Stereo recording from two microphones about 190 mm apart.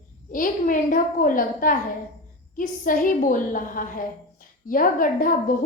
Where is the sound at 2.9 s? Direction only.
45° left (ahead or behind).